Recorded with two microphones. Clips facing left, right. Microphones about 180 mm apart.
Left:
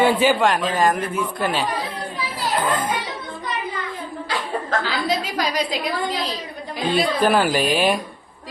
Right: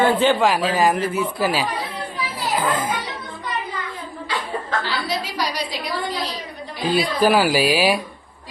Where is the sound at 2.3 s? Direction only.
5° right (ahead or behind).